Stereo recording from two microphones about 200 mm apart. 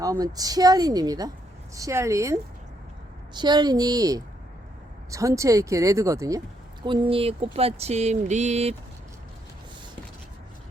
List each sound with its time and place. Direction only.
0.0 s speech: 20° right (ahead or behind); by 8.7 s 35° right (ahead or behind)